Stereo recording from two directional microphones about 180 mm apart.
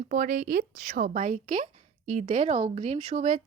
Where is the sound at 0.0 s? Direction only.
50° right (ahead or behind).